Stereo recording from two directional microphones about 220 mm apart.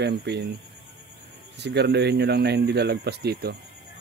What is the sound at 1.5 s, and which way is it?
Speech, 50° right (ahead or behind).